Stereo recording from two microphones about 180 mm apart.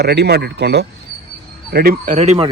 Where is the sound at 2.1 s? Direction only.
35° right (ahead or behind).